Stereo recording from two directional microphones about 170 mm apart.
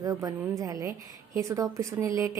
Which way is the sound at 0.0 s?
20° right (ahead or behind).